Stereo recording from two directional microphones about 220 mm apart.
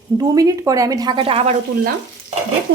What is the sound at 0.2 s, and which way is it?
A woman's voice, 15° right (ahead or behind).